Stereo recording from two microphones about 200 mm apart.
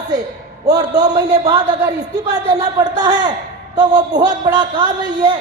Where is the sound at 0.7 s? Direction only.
20° right (ahead or behind).